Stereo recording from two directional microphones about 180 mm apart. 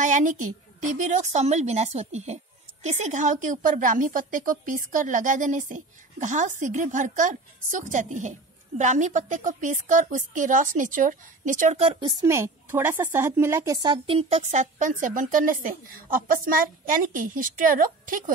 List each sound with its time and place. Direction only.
0.0 s a woman's voice: 45° right (ahead or behind)
12.1 s a woman's voice: 20° right (ahead or behind)
13.8 s a woman's voice: 30° right (ahead or behind); by 18.2 s 50° right (ahead or behind)